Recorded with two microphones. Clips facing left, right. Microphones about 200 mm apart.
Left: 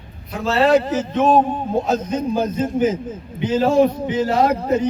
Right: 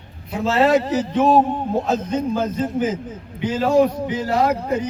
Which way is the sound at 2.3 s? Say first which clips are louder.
Left 2 dB; 15° left (ahead or behind).